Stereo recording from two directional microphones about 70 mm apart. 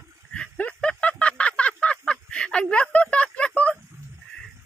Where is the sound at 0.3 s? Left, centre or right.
Centre.